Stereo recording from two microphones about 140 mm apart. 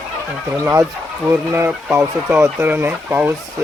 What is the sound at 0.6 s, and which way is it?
Speech, 15° right (ahead or behind).